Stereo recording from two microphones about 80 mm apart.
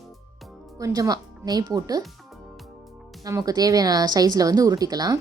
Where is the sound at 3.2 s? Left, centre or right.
Right.